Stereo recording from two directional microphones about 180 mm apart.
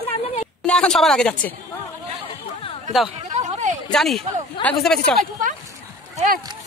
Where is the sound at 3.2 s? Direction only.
40° right (ahead or behind).